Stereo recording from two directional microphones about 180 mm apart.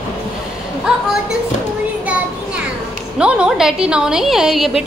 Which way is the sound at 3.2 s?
5° right (ahead or behind).